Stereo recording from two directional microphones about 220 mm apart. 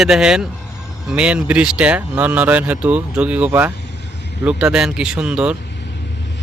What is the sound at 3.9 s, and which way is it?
Vehicle, 50° left (ahead or behind).